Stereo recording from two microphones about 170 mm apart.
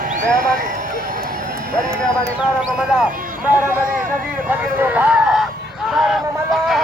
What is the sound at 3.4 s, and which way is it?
Speech, 10° right (ahead or behind).